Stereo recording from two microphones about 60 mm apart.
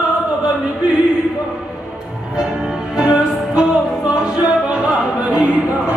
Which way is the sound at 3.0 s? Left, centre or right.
Centre.